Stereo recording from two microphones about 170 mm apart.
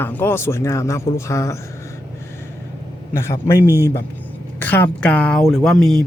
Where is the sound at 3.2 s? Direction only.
15° left (ahead or behind).